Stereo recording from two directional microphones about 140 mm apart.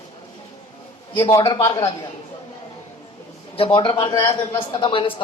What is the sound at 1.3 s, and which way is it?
Speech, 25° left (ahead or behind).